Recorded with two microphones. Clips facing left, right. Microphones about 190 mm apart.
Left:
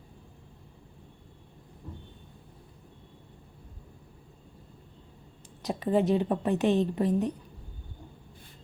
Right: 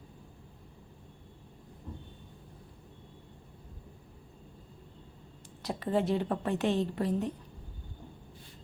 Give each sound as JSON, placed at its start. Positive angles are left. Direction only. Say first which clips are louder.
{"t": 5.6, "sound": "a woman's voice", "louder": "left 4 dB", "side_deg": 15}